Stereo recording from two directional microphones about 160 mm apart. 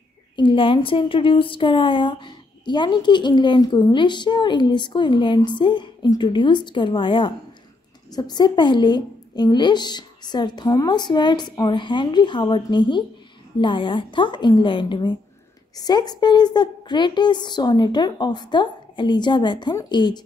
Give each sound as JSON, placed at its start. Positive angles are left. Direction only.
{"t": 0.4, "sound": "a woman's voice", "side_deg": 30}